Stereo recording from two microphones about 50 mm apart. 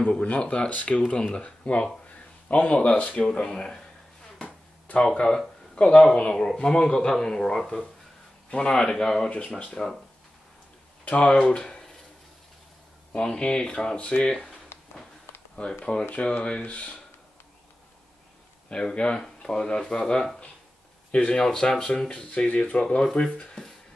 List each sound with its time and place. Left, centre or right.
0.2 s speech: left
4.9 s speech: centre
6.3 s speech: centre
9.3 s speech: left
11.1 s speech: left
13.1 s speech: centre
13.9 s speech: left
14.2 s speech: centre
14.7 s a sound: left
15.8 s speech: centre
18.7 s speech: centre
21.4 s speech: centre